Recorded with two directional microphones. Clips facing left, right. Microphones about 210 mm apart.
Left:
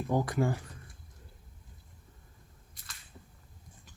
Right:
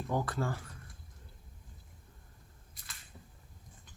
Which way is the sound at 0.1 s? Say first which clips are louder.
Left 5 dB; 15° left (ahead or behind).